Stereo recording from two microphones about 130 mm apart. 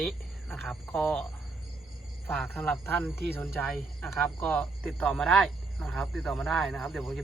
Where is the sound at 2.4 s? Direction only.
10° left (ahead or behind).